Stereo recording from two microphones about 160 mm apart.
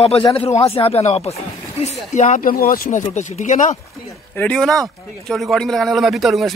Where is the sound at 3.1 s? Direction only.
50° left (ahead or behind).